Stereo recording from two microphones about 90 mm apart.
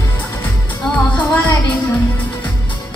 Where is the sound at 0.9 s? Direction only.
15° left (ahead or behind).